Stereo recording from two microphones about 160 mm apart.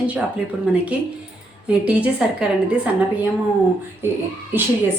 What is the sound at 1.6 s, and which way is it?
Speech, 10° right (ahead or behind).